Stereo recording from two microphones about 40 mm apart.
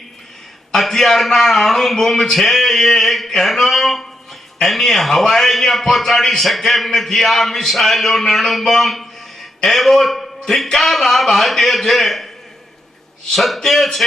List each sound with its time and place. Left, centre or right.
0.7 s a man's voice: centre
3.2 s a sound: centre
4.6 s a man's voice: centre
13.3 s a man's voice: centre